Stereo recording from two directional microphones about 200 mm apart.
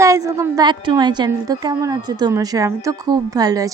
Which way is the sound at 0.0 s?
15° right (ahead or behind).